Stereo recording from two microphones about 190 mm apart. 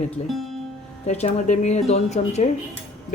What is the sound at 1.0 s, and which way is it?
Speech, 35° left (ahead or behind).